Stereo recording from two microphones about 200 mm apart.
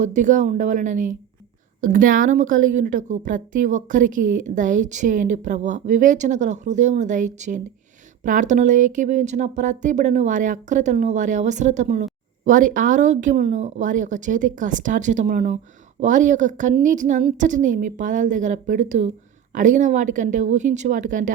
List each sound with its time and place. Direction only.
0.0 s speech: 40° right (ahead or behind)